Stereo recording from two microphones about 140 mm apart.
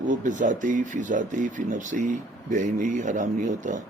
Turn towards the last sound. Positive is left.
turn(degrees=-65)  # may be behind; listen again after turning